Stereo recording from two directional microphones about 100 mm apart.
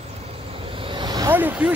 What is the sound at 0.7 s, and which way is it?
Vehicle, 60° right (ahead or behind).